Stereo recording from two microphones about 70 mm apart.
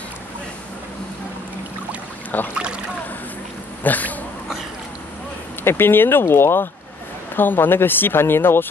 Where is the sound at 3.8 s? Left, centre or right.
Left.